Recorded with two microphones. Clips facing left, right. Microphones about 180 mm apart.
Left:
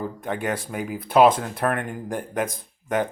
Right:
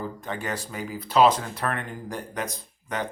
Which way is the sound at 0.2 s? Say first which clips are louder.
Left 5 dB; 55° left (ahead or behind).